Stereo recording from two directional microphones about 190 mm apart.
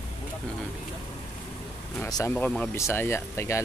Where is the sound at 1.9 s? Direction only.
15° left (ahead or behind).